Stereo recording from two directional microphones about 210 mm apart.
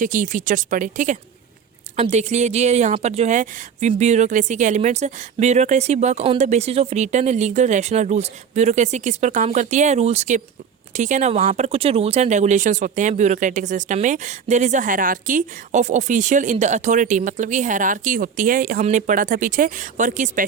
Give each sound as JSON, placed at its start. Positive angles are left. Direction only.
{"t": 0.0, "sound": "speech", "side_deg": -40}